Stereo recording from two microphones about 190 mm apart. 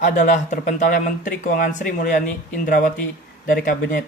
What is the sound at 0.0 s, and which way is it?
Speech, 40° left (ahead or behind).